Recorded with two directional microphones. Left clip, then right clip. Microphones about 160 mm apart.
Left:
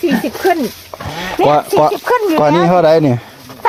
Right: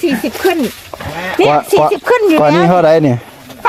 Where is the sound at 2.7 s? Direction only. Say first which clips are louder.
Right 1 dB; 10° right (ahead or behind).